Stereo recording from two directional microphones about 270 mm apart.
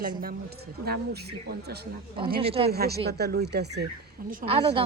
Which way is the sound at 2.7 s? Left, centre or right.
Right.